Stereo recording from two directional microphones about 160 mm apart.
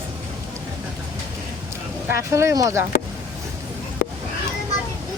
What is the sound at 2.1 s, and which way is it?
Speech, 20° right (ahead or behind).